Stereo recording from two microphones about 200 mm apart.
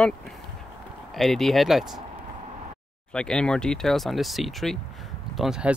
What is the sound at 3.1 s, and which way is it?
Speech, 5° left (ahead or behind).